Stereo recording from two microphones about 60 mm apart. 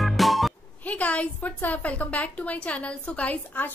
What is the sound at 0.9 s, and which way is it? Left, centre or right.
A woman's voice, left.